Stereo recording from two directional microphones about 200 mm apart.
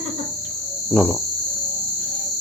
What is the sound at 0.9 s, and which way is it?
Speech, 5° left (ahead or behind).